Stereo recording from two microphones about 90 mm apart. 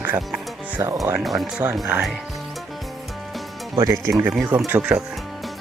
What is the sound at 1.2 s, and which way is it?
Speech, centre (ahead or behind).